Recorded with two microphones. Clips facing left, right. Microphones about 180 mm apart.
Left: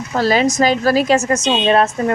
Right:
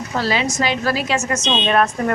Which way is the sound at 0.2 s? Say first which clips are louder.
Left 6 dB; 45° left (ahead or behind).